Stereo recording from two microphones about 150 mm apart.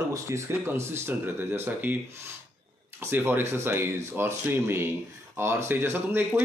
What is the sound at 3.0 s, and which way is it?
Speech, 15° right (ahead or behind).